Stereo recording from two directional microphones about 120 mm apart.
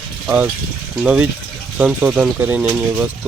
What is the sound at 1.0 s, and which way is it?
Speech, 5° right (ahead or behind).